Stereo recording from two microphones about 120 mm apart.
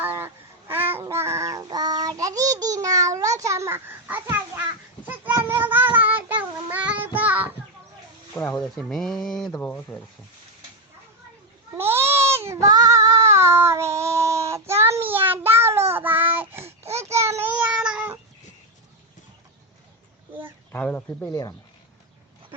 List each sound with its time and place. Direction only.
0.0 s honk: 15° right (ahead or behind)
0.7 s babbling: 15° right (ahead or behind)
1.0 s a sound: 20° right (ahead or behind)
1.6 s child singing: 35° right (ahead or behind); by 7.5 s 15° right (ahead or behind)
8.4 s speech: 20° left (ahead or behind)
8.6 s speech: centre (ahead or behind)
9.5 s speech: 15° left (ahead or behind)
11.8 s child singing: 20° right (ahead or behind)
16.9 s babbling: 25° right (ahead or behind)
20.7 s speech: 15° left (ahead or behind)